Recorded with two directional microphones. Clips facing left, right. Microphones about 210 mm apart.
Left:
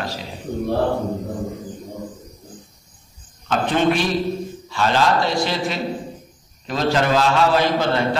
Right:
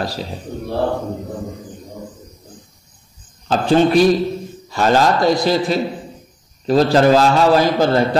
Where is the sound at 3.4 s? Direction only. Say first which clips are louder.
Right 4 dB; 35° right (ahead or behind).